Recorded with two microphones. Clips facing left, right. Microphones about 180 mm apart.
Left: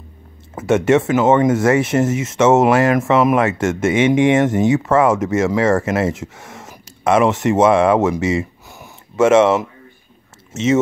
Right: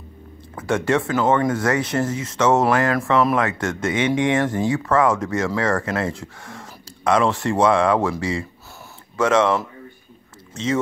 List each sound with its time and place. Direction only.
0.6 s speech: 25° left (ahead or behind)